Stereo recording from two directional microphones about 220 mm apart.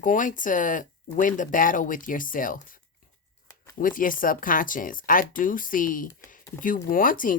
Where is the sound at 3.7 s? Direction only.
40° left (ahead or behind).